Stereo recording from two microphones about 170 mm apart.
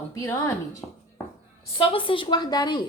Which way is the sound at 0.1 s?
15° left (ahead or behind).